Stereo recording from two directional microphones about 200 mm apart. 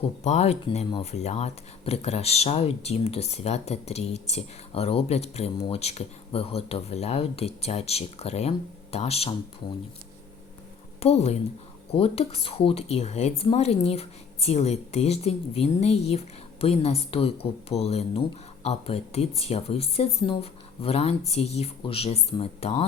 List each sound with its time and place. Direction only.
0.3 s speech: 35° left (ahead or behind)
11.0 s speech: 30° left (ahead or behind)